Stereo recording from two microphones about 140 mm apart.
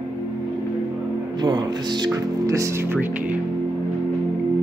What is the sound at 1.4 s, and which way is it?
Speech, 30° right (ahead or behind).